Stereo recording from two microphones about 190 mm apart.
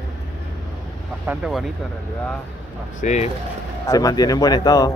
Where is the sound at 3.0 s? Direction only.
40° left (ahead or behind).